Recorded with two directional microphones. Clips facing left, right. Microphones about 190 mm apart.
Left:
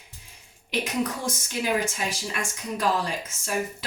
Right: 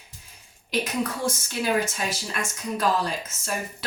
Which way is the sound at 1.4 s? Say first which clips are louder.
Even; 15° left (ahead or behind).